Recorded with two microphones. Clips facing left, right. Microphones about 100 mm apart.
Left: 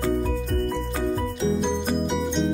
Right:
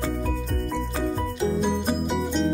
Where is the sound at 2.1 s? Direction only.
Centre (ahead or behind).